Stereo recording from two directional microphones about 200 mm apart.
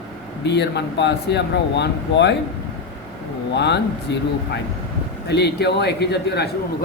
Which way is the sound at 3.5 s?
60° left (ahead or behind).